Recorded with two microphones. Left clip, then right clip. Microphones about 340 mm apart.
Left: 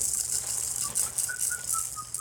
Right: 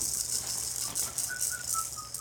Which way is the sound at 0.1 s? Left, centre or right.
Centre.